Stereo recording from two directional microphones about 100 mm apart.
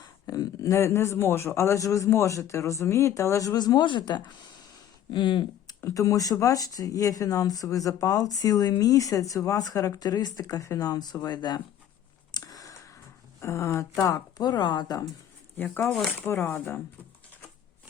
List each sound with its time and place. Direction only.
0.0 s speech: 35° left (ahead or behind)
5.8 s speech: 35° left (ahead or behind)
12.5 s a sound: 35° left (ahead or behind)
13.4 s speech: 30° left (ahead or behind)
15.5 s speech: 20° left (ahead or behind)
15.8 s speech: 5° left (ahead or behind)
16.2 s speech: 20° left (ahead or behind)